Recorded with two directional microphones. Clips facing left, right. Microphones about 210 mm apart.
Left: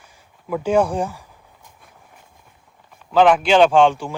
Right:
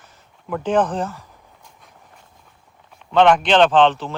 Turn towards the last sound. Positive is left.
turn(degrees=10)  # may be behind; listen again after turning